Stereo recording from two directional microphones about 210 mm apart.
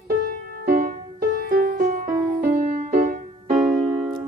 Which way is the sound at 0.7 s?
40° right (ahead or behind).